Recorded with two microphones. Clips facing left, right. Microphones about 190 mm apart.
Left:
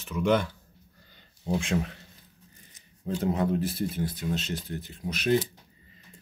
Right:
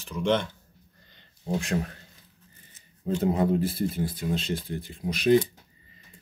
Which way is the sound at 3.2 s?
10° right (ahead or behind).